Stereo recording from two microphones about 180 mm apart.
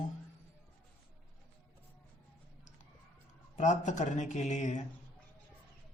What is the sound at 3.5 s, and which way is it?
Speech, 40° left (ahead or behind).